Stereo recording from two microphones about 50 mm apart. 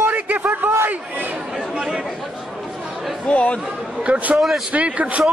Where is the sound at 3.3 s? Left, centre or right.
Left.